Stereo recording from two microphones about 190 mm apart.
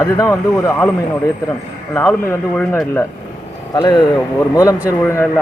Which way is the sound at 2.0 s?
10° left (ahead or behind).